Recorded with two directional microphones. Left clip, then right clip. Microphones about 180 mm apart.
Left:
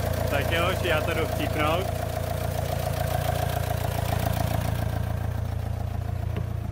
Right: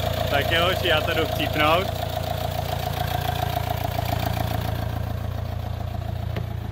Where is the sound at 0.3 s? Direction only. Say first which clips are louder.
Right 5 dB; 5° right (ahead or behind).